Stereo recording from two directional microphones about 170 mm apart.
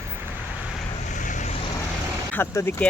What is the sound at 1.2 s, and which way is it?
Vehicle, 50° left (ahead or behind).